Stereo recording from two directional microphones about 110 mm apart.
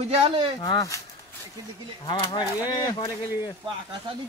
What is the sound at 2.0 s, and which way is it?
Speech, 45° left (ahead or behind).